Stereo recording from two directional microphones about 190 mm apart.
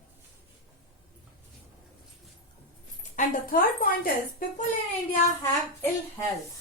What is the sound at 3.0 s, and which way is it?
Speech, 45° left (ahead or behind).